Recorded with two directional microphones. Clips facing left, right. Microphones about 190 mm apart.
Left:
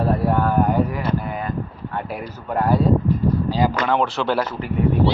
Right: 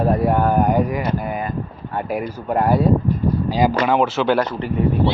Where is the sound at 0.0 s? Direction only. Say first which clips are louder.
Right 2 dB; 15° right (ahead or behind).